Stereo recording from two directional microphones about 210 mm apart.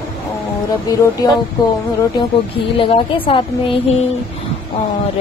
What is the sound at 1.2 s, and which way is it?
Speech, 15° left (ahead or behind).